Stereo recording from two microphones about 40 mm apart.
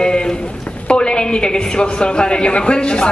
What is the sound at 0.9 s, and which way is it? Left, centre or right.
A woman's voice, left.